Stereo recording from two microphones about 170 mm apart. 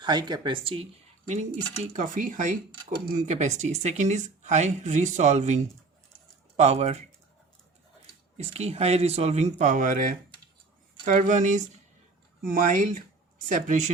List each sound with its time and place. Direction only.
0.0 s speech: 25° right (ahead or behind)
1.9 s speech: 50° right (ahead or behind)
8.4 s speech: 40° right (ahead or behind)